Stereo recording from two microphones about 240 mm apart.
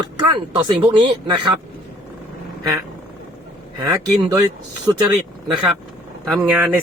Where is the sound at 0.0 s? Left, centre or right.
Right.